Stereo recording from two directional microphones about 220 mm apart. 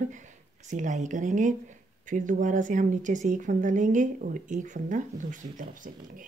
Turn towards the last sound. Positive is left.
turn(degrees=-35)  # may be behind; listen again after turning